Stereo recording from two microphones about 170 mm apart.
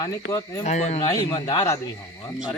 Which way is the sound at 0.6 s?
40° left (ahead or behind).